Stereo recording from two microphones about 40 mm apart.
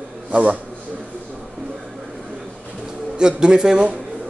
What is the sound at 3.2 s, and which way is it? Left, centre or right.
Speech, centre.